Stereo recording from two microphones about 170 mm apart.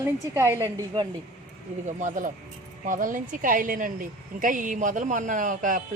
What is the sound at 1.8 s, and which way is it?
A woman's voice, 45° right (ahead or behind).